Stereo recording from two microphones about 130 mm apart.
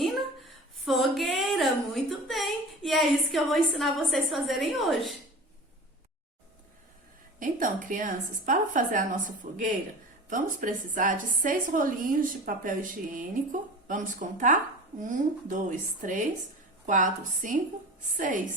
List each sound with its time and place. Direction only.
0.0 s a woman's voice: centre (ahead or behind)
7.3 s a woman's voice: 90° right